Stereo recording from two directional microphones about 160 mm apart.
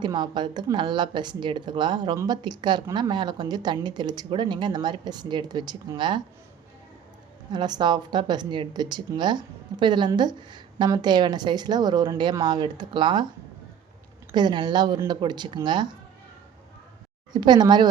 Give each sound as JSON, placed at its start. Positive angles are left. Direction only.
{"t": 0.0, "sound": "a woman's voice", "side_deg": -30}
{"t": 7.5, "sound": "a woman's voice", "side_deg": -25}
{"t": 14.3, "sound": "a woman's voice", "side_deg": -30}
{"t": 17.3, "sound": "a woman's voice", "side_deg": -25}